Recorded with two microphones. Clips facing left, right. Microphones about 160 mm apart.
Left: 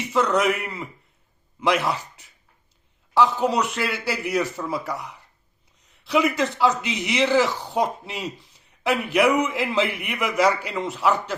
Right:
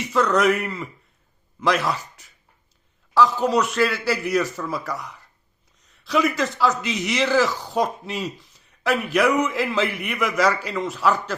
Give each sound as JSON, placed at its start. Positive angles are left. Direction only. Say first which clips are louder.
{"t": 0.1, "sound": "speech", "louder": "right 2 dB", "side_deg": 20}
{"t": 3.2, "sound": "speech", "louder": "right 1 dB", "side_deg": 25}
{"t": 6.1, "sound": "speech", "louder": "even", "side_deg": 20}